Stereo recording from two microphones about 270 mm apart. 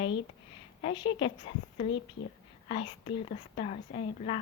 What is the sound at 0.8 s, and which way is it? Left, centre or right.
Speech, centre.